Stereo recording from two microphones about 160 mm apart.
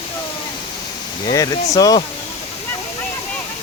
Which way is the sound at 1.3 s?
20° left (ahead or behind).